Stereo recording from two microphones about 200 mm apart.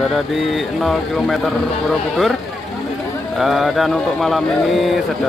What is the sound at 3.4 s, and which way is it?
Speech, centre (ahead or behind).